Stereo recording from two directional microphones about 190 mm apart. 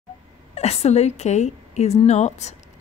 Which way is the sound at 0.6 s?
35° left (ahead or behind).